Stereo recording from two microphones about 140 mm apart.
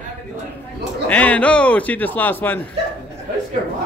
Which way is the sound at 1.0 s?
10° left (ahead or behind).